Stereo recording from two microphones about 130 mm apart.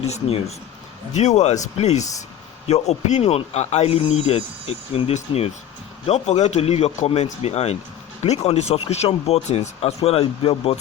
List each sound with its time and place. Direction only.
0.0 s speech: 50° left (ahead or behind)